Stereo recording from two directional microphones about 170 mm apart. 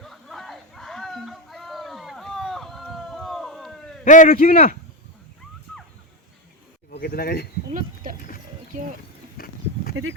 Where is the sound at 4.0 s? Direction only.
50° left (ahead or behind).